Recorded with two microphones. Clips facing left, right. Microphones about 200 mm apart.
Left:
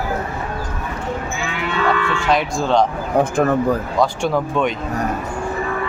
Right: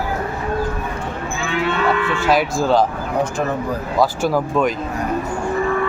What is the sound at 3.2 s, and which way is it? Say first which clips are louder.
Speech: left 5 dB; 55° left (ahead or behind).